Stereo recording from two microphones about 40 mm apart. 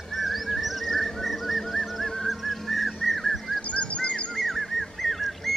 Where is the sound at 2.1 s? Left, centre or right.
Centre.